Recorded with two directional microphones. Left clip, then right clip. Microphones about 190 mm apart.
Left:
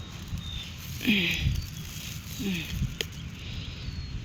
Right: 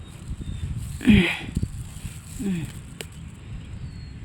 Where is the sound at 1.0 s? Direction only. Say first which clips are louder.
Right 5 dB; 55° right (ahead or behind).